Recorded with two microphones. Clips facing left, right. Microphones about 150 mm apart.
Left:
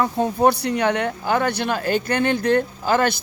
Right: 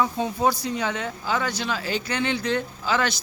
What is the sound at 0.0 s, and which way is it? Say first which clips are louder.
Speech: left 5 dB; 55° left (ahead or behind).